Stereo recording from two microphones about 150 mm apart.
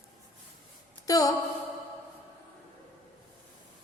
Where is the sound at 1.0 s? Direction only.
20° left (ahead or behind).